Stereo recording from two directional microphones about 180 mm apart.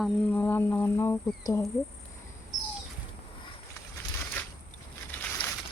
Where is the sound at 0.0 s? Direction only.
10° left (ahead or behind).